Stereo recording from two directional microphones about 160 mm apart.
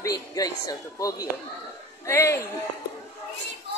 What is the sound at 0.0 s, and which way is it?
A woman's voice, 20° left (ahead or behind).